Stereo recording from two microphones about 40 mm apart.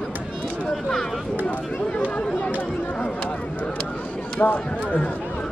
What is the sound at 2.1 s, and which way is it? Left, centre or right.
Chatter, left.